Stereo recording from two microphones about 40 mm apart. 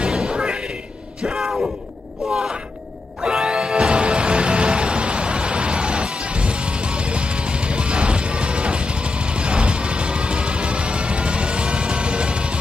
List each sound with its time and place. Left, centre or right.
0.0 s a sound: centre
1.2 s speech: centre
3.4 s music: centre